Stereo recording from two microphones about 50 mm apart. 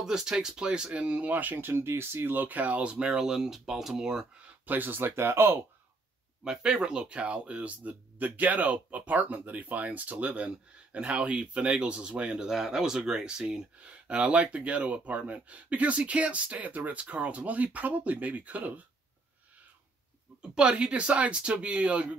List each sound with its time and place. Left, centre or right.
0.0 s speech: centre; by 1.7 s right
1.7 s speech: right; by 4.3 s centre
4.6 s speech: right
6.4 s speech: centre
12.4 s speech: centre
13.8 s speech: right
20.5 s speech: right